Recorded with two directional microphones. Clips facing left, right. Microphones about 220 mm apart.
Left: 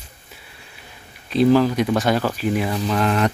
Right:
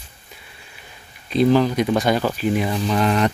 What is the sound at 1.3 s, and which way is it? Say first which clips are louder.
Speech: left 1 dB; centre (ahead or behind).